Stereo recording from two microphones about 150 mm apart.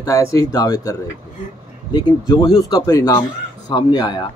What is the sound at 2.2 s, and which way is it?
Speech, 25° left (ahead or behind).